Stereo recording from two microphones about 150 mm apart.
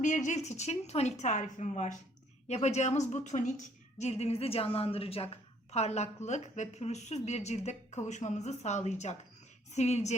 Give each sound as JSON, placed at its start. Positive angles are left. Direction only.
{"t": 0.0, "sound": "speech", "side_deg": 55}